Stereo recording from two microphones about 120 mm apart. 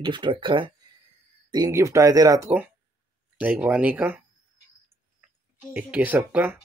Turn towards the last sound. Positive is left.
turn(degrees=-15)  # may be behind; listen again after turning